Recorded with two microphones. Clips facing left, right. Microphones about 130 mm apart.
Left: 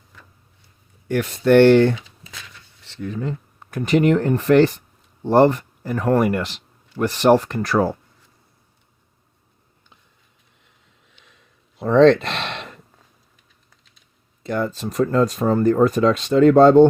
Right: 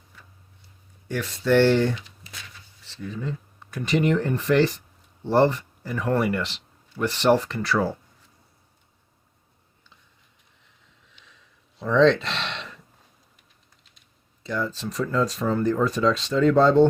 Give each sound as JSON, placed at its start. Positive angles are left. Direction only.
{"t": 1.0, "sound": "speech", "side_deg": 55}
{"t": 11.3, "sound": "a sound", "side_deg": 55}
{"t": 14.4, "sound": "speech", "side_deg": 55}